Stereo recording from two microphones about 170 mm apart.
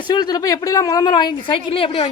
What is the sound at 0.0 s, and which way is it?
Speech, 25° left (ahead or behind).